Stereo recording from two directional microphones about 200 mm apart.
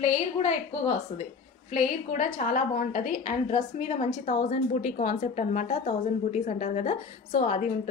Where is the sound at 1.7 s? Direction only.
40° left (ahead or behind).